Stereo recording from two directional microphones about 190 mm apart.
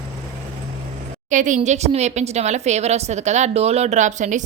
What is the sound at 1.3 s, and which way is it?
A woman's voice, 40° right (ahead or behind).